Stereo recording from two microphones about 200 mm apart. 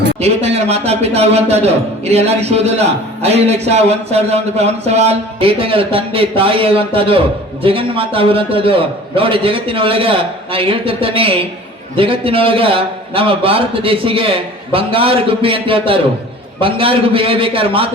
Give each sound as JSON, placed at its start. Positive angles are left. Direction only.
{"t": 0.2, "sound": "a man's voice", "side_deg": -30}